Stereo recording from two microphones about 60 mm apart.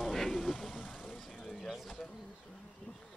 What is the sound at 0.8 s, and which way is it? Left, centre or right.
Vehicle, left.